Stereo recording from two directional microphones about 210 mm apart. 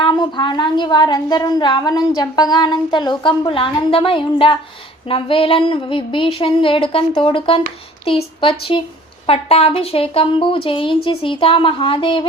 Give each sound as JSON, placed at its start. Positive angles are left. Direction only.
{"t": 0.0, "sound": "a woman's voice", "side_deg": 20}